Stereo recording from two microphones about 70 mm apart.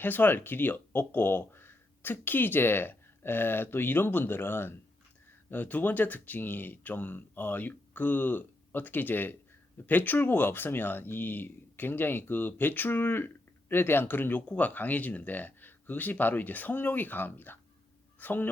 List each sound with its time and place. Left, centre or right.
0.0 s speech: left